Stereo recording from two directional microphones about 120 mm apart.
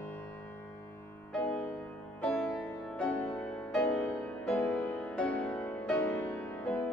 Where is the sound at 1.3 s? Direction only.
10° left (ahead or behind).